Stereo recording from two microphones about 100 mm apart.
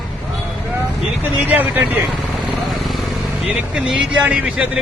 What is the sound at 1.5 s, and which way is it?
Speech, 20° right (ahead or behind).